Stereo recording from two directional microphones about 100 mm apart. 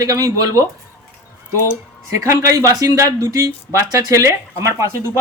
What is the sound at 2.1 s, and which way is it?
A man's voice, 30° right (ahead or behind).